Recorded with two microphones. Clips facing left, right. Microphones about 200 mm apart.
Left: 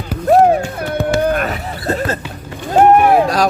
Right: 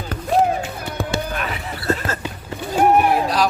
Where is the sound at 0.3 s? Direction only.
65° left (ahead or behind); by 2.1 s 35° left (ahead or behind).